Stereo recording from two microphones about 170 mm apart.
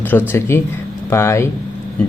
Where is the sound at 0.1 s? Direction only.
15° left (ahead or behind).